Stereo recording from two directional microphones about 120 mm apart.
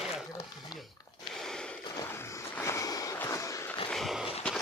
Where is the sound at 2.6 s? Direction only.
25° left (ahead or behind).